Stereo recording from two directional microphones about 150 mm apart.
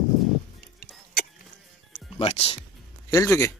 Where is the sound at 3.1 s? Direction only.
20° left (ahead or behind).